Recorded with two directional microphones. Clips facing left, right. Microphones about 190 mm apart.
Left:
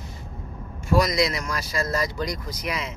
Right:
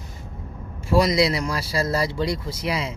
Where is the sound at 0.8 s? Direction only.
30° right (ahead or behind).